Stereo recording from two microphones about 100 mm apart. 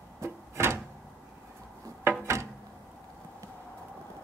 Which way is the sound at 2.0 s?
25° right (ahead or behind).